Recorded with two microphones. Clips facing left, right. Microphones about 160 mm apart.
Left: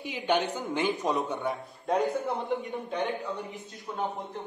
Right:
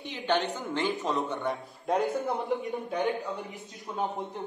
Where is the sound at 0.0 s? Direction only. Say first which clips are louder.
Left 1 dB; 10° left (ahead or behind).